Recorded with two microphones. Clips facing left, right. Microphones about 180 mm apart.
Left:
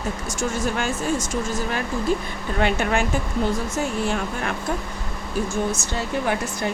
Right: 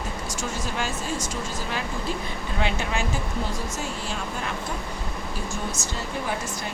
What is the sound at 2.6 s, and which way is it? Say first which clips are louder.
Speech: left 6 dB; 60° left (ahead or behind).